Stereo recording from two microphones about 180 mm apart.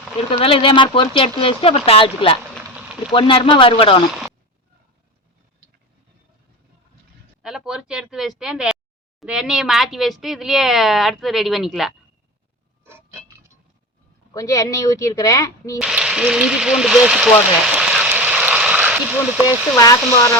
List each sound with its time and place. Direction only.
0.2 s speech: 30° left (ahead or behind)
7.4 s speech: 5° right (ahead or behind)
12.8 s a sound: 15° right (ahead or behind)
14.3 s speech: 20° left (ahead or behind)
15.8 s speech: 5° right (ahead or behind)